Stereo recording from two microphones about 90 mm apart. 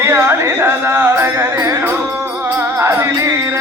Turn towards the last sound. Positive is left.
turn(degrees=-30)  # may be behind; listen again after turning